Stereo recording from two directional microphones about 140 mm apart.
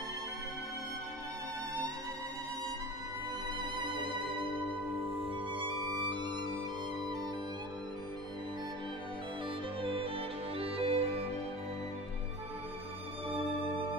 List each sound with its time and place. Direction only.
5.5 s music: 35° right (ahead or behind)
9.8 s music: 40° right (ahead or behind)